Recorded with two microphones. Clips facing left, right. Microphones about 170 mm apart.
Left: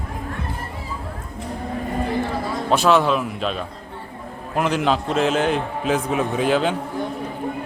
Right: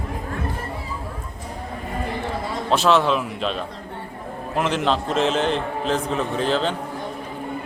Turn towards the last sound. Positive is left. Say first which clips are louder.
# left 2 dB
turn(degrees=10)  # may be behind; listen again after turning